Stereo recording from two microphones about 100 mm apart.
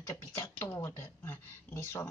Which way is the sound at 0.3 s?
30° left (ahead or behind).